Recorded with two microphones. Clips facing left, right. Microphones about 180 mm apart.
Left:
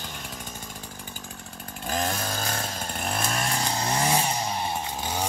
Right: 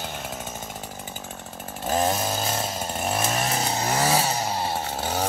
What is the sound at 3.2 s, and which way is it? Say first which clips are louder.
Vehicle: right 3 dB; 20° right (ahead or behind).